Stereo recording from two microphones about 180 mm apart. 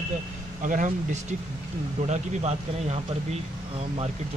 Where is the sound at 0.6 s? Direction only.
45° right (ahead or behind).